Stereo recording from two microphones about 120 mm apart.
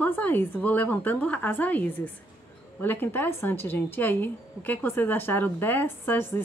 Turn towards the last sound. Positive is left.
turn(degrees=20)  # may be behind; listen again after turning